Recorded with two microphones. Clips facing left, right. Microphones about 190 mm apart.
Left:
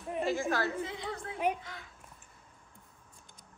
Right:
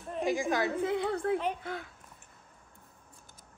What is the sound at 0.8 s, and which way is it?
A woman's voice, 60° right (ahead or behind).